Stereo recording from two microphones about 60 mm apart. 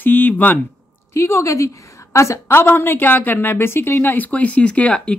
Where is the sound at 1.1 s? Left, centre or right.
Left.